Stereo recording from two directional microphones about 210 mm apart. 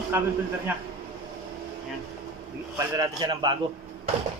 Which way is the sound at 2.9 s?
20° right (ahead or behind).